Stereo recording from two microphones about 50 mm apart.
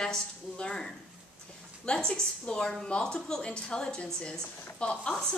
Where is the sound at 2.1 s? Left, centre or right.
Centre.